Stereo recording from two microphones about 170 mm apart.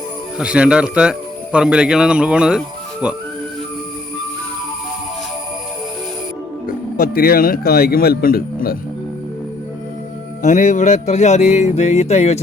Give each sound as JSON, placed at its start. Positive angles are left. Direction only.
{"t": 0.3, "sound": "speech", "side_deg": -5}
{"t": 6.9, "sound": "a man's voice", "side_deg": 60}
{"t": 10.4, "sound": "speech", "side_deg": 45}